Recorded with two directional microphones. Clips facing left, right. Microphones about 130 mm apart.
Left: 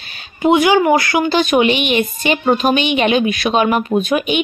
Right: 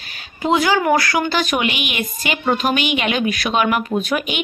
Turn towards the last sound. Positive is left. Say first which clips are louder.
# left 5 dB
turn(degrees=20)  # may be behind; listen again after turning